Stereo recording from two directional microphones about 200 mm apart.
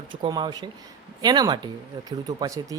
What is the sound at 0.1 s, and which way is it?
A man's voice, 25° right (ahead or behind).